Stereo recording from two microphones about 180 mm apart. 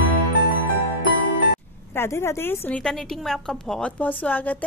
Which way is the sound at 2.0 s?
15° left (ahead or behind).